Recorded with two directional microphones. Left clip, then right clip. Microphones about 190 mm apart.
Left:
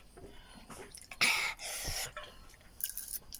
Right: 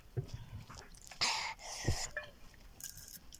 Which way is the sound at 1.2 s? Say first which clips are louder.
Left 5 dB; 10° left (ahead or behind).